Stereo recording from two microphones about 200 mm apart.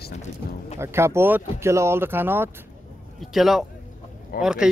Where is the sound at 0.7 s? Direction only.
15° right (ahead or behind).